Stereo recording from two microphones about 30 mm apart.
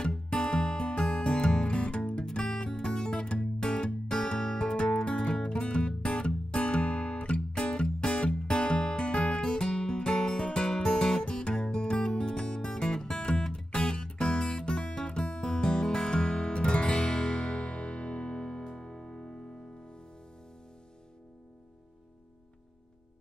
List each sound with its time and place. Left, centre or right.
0.3 s music: left
1.8 s music: left